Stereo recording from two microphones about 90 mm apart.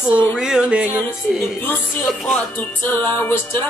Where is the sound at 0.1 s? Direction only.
25° left (ahead or behind).